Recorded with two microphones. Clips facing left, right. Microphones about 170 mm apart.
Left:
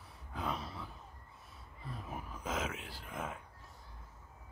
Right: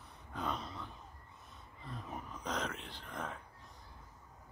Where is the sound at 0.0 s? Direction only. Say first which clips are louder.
Even; 5° left (ahead or behind).